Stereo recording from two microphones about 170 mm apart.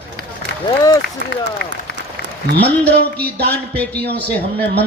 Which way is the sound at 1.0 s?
90° left.